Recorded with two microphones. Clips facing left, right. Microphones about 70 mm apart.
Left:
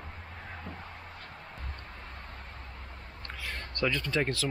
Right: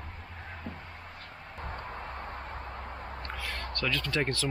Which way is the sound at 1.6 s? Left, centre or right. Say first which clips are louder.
Right 7 dB; right.